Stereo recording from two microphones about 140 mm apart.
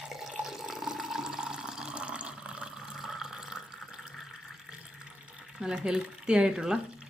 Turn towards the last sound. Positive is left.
turn(degrees=-5)  # may be behind; listen again after turning